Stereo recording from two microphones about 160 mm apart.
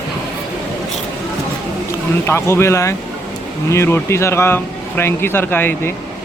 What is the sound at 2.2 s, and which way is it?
Speech, 15° left (ahead or behind).